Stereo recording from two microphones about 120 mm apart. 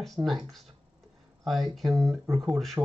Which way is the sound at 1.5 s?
Centre (ahead or behind).